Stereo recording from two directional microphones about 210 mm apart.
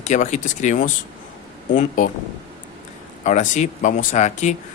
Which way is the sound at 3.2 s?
35° left (ahead or behind).